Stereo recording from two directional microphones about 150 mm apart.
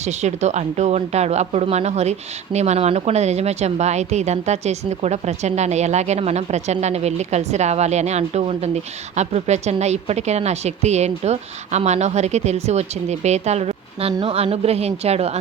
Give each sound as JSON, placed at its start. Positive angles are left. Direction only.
{"t": 0.0, "sound": "speech", "side_deg": -50}